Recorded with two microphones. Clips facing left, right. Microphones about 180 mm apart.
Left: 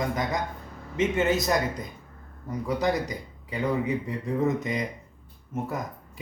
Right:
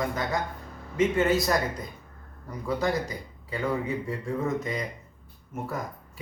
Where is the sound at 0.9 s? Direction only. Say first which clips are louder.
Right 1 dB; 20° left (ahead or behind).